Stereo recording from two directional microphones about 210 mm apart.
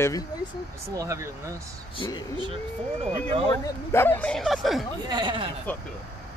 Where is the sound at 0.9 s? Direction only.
15° right (ahead or behind).